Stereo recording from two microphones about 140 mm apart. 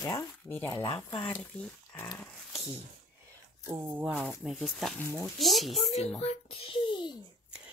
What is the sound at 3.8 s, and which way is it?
Speech, 10° right (ahead or behind).